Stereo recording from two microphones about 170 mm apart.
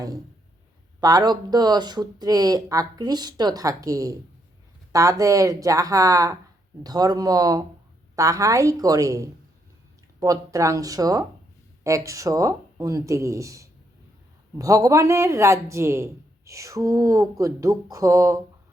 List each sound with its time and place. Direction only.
1.0 s speech: 25° right (ahead or behind)